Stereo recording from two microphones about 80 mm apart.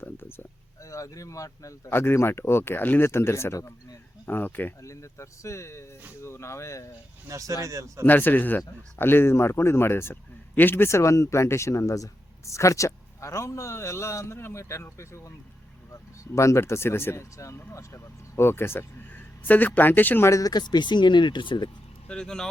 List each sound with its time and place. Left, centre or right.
0.0 s a sound: left
0.9 s speech: left
1.9 s a man's voice: left
4.3 s speech: left
4.8 s a man's voice: left
7.3 s speech: right
8.0 s a man's voice: left
20.2 s a man's voice: left
20.5 s speech: left
22.0 s speech: centre